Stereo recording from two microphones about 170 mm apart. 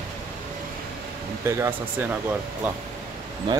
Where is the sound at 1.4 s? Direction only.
15° right (ahead or behind).